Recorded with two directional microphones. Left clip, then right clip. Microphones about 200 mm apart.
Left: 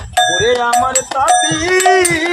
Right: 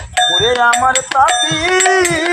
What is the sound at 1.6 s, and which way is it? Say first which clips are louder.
Music: even; centre (ahead or behind).